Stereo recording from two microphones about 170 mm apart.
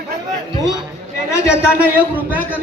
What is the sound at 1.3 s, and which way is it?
Speech, 15° left (ahead or behind).